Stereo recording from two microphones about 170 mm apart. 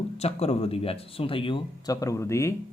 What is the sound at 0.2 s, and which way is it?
Speech, 35° left (ahead or behind).